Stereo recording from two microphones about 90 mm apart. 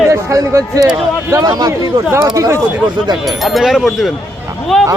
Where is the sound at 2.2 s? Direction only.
40° right (ahead or behind).